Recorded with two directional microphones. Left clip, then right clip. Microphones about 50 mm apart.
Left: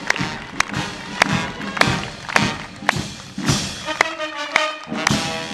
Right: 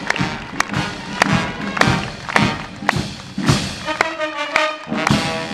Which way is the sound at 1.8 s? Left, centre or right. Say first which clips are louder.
Right 1 dB; left.